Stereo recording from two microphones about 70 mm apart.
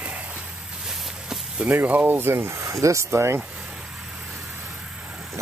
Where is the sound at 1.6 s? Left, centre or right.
Right.